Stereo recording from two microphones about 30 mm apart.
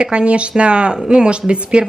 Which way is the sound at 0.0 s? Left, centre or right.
Right.